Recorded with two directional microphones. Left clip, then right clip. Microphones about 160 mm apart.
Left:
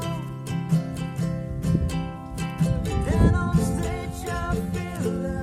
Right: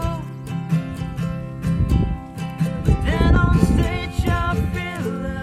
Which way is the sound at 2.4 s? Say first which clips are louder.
Right 2 dB; 25° left (ahead or behind).